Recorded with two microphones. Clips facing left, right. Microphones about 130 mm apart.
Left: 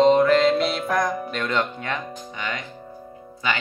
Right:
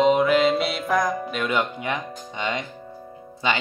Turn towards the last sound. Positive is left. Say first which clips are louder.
# right 2 dB
turn(degrees=-25)  # may be behind; listen again after turning